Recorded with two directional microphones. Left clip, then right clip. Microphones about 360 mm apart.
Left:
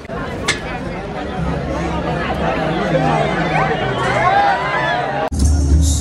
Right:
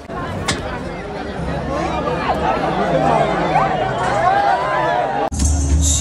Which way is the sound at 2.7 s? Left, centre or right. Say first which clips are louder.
Right 1 dB; right.